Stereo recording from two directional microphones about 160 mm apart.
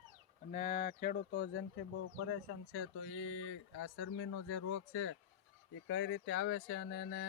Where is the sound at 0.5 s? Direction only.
55° left (ahead or behind).